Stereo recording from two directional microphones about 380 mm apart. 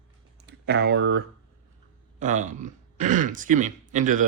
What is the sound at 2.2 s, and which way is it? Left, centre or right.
Speech, centre.